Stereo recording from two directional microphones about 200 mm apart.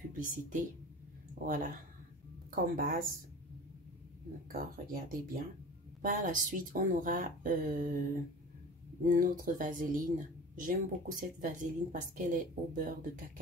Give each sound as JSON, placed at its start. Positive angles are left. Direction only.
{"t": 0.2, "sound": "speech", "side_deg": -40}
{"t": 4.5, "sound": "speech", "side_deg": -50}
{"t": 9.1, "sound": "speech", "side_deg": -40}